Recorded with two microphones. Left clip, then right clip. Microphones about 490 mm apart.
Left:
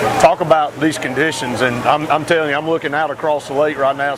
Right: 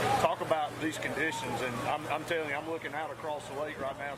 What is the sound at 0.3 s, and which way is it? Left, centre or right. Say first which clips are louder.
Speech: left 18 dB; left.